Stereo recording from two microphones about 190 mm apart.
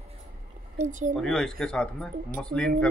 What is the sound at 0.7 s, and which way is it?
Speech, 40° right (ahead or behind).